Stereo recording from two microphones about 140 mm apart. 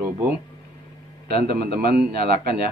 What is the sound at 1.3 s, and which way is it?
A man's voice, 90° right.